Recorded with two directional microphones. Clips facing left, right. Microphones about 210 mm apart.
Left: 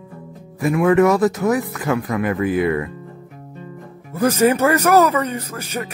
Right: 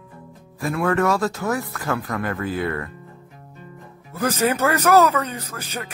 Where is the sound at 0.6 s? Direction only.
15° left (ahead or behind).